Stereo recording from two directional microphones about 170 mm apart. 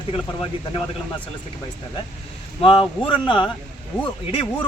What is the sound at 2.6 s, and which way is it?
A man's voice, 30° left (ahead or behind).